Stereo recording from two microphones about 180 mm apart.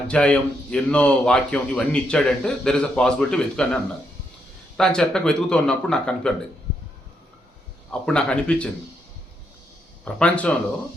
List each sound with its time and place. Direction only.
0.1 s a man's voice: 5° left (ahead or behind)
4.8 s a man's voice: 5° left (ahead or behind)
7.9 s a man's voice: 5° left (ahead or behind)
10.0 s speech: 5° left (ahead or behind)